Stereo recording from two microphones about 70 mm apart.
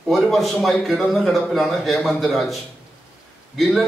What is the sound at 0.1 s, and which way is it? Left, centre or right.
A man's voice, centre.